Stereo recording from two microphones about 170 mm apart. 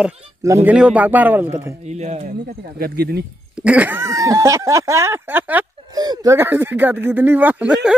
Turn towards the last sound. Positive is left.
turn(degrees=-5)  # may be behind; listen again after turning